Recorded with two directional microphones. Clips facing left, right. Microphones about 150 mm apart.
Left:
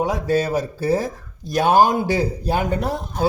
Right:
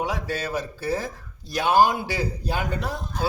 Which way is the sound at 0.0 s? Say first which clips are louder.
Left 8 dB; 40° left (ahead or behind).